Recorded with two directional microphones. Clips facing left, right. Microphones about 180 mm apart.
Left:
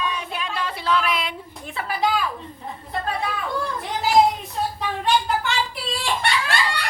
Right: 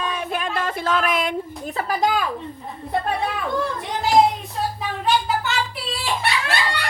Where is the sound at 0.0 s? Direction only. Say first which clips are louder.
Right 3 dB; 50° right (ahead or behind).